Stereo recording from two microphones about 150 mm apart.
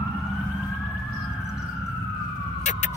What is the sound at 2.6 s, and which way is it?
Emergency vehicle, 50° left (ahead or behind).